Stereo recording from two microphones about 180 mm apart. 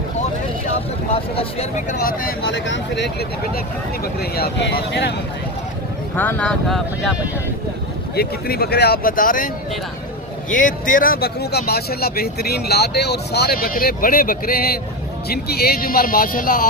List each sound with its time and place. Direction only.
1.1 s speech: 35° left (ahead or behind)
2.0 s speech: 55° left (ahead or behind)
2.5 s speech: 90° left; by 5.1 s 70° left (ahead or behind)
6.1 s speech: 10° left (ahead or behind)
8.1 s speech: 60° left (ahead or behind)
10.5 s speech: 45° left (ahead or behind)